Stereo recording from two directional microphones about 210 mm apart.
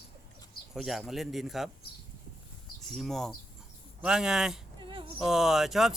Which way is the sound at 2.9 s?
Centre (ahead or behind).